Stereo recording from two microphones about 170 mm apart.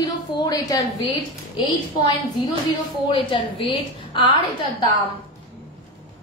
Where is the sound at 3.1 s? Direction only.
30° left (ahead or behind).